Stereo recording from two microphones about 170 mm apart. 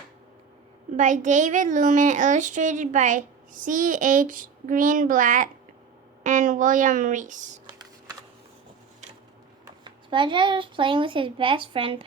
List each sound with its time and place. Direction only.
0.9 s a woman's voice: 45° right (ahead or behind)
9.8 s speech: 30° right (ahead or behind)